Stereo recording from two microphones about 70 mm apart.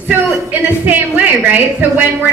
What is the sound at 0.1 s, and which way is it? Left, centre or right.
A woman's voice, right.